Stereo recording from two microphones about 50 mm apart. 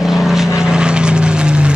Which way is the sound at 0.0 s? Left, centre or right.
Centre.